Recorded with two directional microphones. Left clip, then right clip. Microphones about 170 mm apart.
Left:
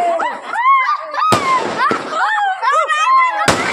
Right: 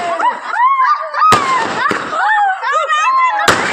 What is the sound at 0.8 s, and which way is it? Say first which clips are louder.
Thunk: right 4 dB; 20° left (ahead or behind).